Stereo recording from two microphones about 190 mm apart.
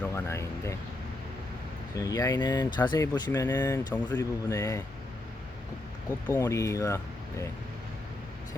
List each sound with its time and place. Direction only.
0.0 s speech: 15° left (ahead or behind)
2.0 s speech: 20° left (ahead or behind)
6.3 s speech: 15° left (ahead or behind)